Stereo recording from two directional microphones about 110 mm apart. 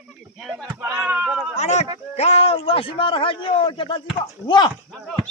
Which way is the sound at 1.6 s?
90° left.